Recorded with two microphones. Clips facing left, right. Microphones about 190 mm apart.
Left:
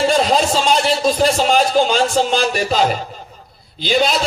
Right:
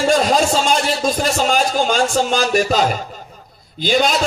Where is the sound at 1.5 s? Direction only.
45° right (ahead or behind).